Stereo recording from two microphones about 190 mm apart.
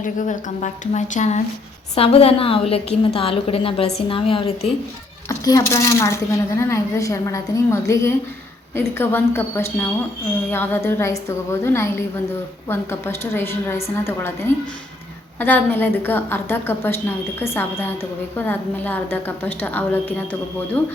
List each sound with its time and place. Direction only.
0.0 s a woman's voice: 40° left (ahead or behind)
5.3 s a woman's voice: 15° left (ahead or behind)